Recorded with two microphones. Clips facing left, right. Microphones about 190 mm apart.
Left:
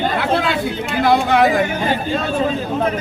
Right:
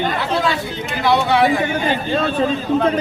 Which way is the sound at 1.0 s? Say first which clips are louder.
Left 1 dB; 50° left (ahead or behind).